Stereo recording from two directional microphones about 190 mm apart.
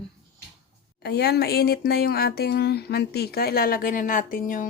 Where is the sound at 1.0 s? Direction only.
60° left (ahead or behind).